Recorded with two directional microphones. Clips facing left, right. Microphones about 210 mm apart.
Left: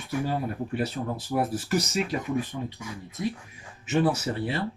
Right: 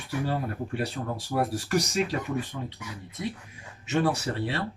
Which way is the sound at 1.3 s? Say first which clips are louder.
Even; 5° left (ahead or behind).